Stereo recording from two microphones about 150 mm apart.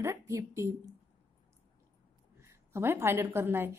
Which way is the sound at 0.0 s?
20° right (ahead or behind).